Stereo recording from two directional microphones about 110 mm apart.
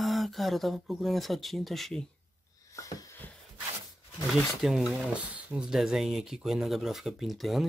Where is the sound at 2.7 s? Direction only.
30° left (ahead or behind).